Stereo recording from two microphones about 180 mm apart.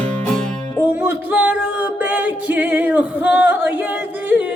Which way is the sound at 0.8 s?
10° right (ahead or behind).